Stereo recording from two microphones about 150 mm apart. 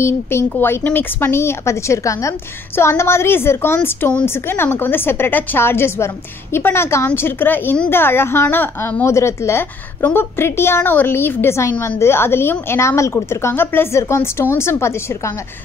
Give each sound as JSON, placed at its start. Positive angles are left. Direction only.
{"t": 0.0, "sound": "a woman's voice", "side_deg": 15}